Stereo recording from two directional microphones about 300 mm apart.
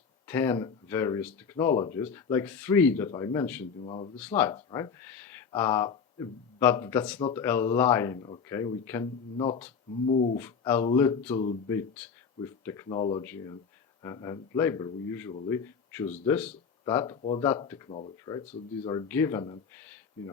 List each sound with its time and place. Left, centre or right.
0.3 s speech: centre
3.8 s speech: centre
10.1 s speech: left
10.3 s speech: centre